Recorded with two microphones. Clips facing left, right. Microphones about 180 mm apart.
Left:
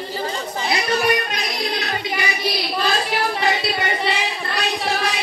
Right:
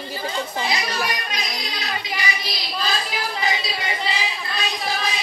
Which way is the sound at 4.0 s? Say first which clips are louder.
Left 4 dB; 70° left (ahead or behind).